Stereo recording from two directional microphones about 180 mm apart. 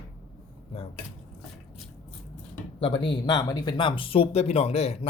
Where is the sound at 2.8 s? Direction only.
25° left (ahead or behind).